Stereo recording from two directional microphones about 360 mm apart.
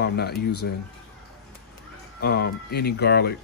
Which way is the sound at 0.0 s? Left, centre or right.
Left.